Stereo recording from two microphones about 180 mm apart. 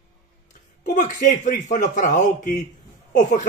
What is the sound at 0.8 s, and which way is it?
A man's voice, 45° left (ahead or behind).